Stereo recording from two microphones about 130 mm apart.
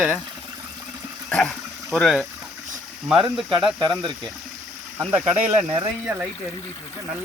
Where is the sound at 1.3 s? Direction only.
5° left (ahead or behind).